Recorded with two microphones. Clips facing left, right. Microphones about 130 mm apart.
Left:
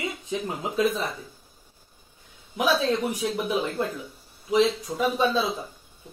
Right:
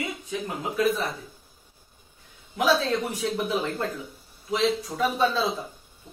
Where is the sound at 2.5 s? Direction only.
15° left (ahead or behind).